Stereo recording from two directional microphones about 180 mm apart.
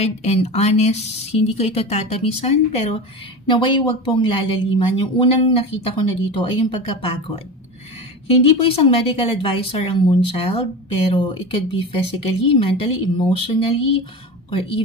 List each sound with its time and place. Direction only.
0.0 s speech: 35° left (ahead or behind)
11.7 s speech: 30° left (ahead or behind)